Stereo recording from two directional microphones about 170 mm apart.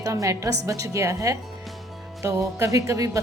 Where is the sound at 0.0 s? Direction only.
20° right (ahead or behind).